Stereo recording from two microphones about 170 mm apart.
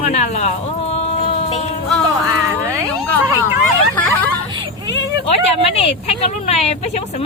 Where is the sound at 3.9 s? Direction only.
10° left (ahead or behind).